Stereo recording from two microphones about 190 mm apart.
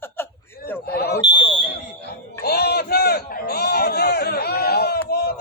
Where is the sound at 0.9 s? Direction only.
55° left (ahead or behind).